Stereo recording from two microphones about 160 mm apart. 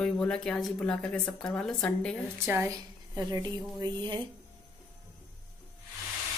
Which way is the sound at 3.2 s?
25° right (ahead or behind).